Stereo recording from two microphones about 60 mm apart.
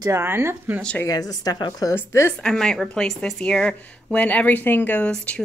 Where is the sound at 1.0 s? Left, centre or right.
Left.